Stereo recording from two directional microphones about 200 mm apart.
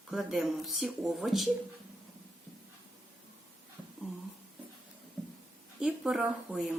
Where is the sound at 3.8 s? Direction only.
5° right (ahead or behind).